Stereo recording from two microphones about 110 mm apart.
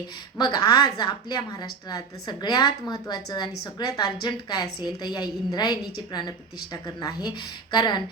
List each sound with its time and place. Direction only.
0.3 s a woman's voice: 40° left (ahead or behind)